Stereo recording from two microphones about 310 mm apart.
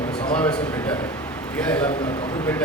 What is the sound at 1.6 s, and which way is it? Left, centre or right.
Speech, centre.